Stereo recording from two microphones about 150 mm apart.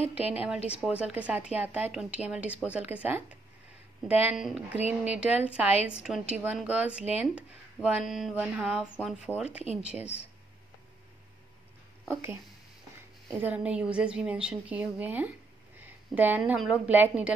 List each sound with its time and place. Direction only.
0.2 s speech: 10° right (ahead or behind)
12.1 s a woman's voice: 15° right (ahead or behind)